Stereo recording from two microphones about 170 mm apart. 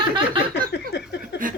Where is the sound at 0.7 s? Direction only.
80° left.